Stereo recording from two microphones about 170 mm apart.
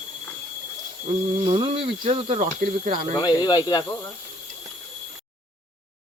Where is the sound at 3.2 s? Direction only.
25° left (ahead or behind).